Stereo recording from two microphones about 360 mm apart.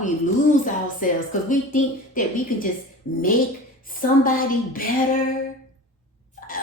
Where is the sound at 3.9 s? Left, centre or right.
Left.